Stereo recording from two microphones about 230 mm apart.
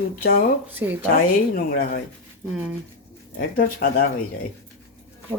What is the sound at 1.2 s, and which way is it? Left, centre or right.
Speech, left.